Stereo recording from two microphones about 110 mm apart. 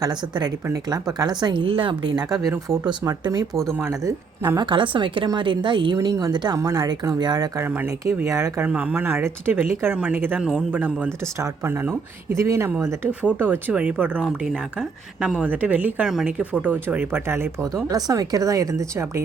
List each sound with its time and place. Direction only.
0.0 s speech: 40° right (ahead or behind)
2.6 s speech: 30° right (ahead or behind)
4.6 s a woman's voice: 50° right (ahead or behind)
6.0 s speech: 35° right (ahead or behind)
8.6 s speech: 10° right (ahead or behind)
11.3 s speech: 25° right (ahead or behind)
17.8 s speech: 35° right (ahead or behind)